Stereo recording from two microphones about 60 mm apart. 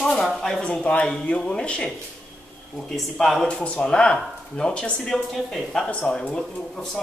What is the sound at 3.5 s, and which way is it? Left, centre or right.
A woman's voice, centre.